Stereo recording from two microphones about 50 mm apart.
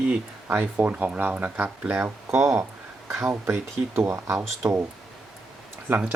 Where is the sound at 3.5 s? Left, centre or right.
Right.